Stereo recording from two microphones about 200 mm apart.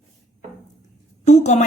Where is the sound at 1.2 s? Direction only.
35° left (ahead or behind).